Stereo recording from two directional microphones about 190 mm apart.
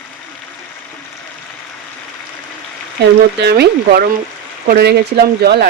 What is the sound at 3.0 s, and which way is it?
Speech, 60° right (ahead or behind).